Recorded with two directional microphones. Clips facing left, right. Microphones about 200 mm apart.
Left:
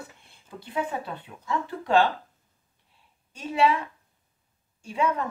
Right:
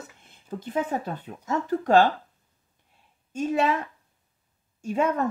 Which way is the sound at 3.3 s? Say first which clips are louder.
Even; 45° right (ahead or behind).